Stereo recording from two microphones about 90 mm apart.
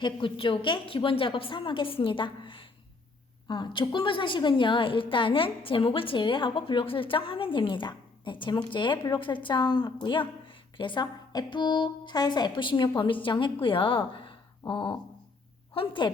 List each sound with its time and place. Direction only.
0.0 s a woman's voice: 70° left (ahead or behind)
15.7 s a woman's voice: 80° left